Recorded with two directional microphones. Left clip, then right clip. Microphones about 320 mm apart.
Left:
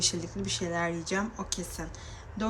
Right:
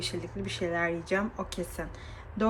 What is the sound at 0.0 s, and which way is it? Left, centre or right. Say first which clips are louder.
A woman's voice: left 4 dB; centre.